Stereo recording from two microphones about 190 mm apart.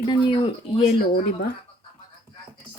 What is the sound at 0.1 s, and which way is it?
Speech, 25° left (ahead or behind).